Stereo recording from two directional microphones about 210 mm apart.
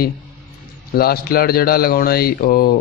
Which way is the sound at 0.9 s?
45° left (ahead or behind).